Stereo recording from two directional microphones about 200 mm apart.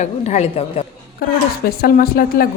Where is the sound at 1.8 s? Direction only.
50° left (ahead or behind).